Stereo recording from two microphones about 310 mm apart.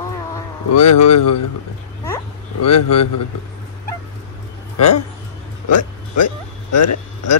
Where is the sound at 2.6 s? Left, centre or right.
Left.